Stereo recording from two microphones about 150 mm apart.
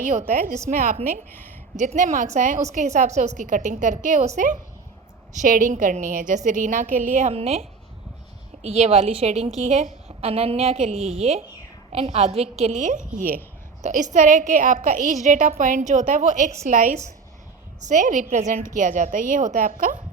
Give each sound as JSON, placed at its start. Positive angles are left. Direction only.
{"t": 0.0, "sound": "a woman's voice", "side_deg": -60}
{"t": 1.3, "sound": "speech", "side_deg": 15}
{"t": 1.7, "sound": "a woman's voice", "side_deg": -55}
{"t": 5.3, "sound": "a woman's voice", "side_deg": -55}
{"t": 7.3, "sound": "a woman's voice", "side_deg": -40}